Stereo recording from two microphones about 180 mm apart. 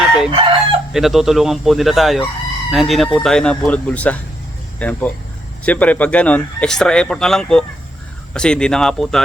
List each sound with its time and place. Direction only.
0.3 s chicken: 30° right (ahead or behind)
0.9 s speech: centre (ahead or behind)